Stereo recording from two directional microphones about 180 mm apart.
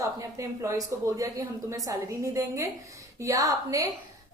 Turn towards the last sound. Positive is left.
turn(degrees=-20)  # may be behind; listen again after turning